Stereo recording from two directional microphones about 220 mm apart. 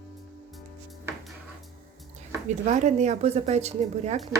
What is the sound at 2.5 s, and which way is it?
A woman's voice, 30° right (ahead or behind).